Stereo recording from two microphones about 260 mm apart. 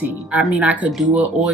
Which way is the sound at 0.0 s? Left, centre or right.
Centre.